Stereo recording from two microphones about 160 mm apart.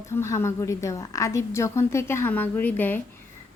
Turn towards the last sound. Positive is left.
turn(degrees=10)  # may be behind; listen again after turning